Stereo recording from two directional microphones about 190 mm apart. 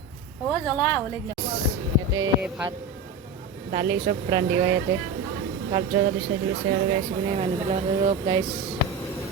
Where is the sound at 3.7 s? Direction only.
25° right (ahead or behind).